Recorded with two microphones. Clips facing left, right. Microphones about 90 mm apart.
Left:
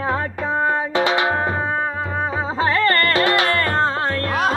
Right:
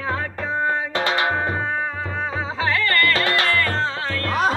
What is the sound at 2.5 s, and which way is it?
Music, 40° left (ahead or behind).